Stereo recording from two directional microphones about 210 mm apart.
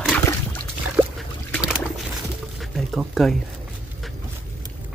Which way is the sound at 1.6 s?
5° right (ahead or behind).